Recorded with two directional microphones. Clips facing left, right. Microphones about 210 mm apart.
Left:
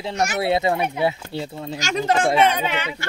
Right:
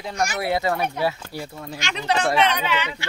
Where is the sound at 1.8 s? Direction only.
45° left (ahead or behind).